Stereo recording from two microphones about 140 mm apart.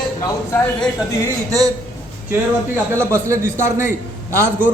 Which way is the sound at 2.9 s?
20° right (ahead or behind).